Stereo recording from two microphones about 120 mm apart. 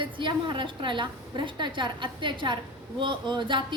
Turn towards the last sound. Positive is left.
turn(degrees=-40)  # may be behind; listen again after turning